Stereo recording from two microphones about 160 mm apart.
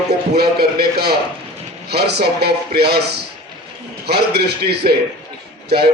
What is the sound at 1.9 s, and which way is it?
A man's voice, 90° right.